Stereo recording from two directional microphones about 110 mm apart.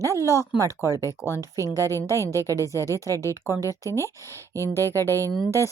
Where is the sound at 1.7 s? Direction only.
25° left (ahead or behind).